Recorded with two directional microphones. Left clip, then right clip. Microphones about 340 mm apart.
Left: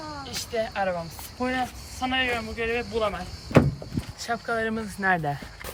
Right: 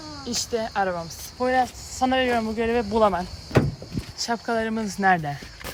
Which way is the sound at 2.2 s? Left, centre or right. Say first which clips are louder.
Right 4 dB; right.